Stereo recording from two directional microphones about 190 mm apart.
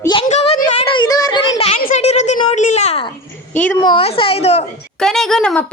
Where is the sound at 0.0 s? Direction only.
25° left (ahead or behind).